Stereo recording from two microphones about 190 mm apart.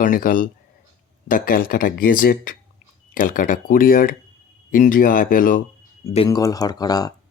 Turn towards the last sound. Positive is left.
turn(degrees=20)  # may be behind; listen again after turning